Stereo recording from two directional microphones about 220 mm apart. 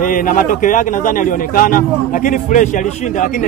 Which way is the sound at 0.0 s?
40° left (ahead or behind).